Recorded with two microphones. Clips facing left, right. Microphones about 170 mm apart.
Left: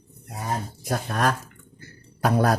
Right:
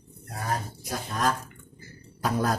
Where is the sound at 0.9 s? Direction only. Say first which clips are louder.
Left 4 dB; 65° left (ahead or behind).